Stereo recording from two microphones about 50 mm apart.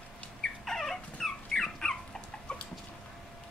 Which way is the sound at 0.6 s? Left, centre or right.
Centre.